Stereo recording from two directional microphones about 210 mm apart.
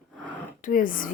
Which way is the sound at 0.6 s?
40° left (ahead or behind).